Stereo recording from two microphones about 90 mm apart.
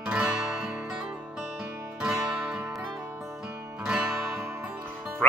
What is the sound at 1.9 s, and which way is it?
Music, 10° right (ahead or behind).